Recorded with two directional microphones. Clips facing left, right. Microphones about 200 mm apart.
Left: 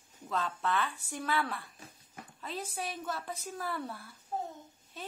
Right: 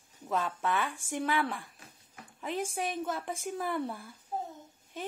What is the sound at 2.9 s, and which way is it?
Speech, 20° right (ahead or behind).